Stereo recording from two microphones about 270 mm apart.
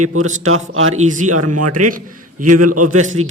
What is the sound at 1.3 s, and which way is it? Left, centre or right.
Speech, right.